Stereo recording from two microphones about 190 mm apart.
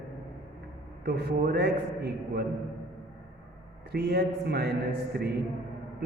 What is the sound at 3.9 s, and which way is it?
Speech, 55° right (ahead or behind).